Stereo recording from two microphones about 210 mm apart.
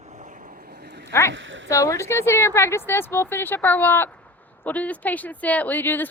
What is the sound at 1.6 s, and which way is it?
Speech, 15° left (ahead or behind).